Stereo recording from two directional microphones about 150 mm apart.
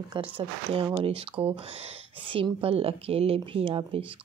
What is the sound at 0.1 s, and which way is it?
A woman's voice, 35° right (ahead or behind).